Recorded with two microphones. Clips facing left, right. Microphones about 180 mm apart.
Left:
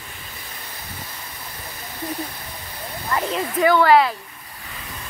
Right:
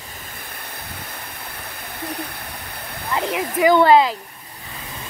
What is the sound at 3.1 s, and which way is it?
Waterfall, 15° right (ahead or behind).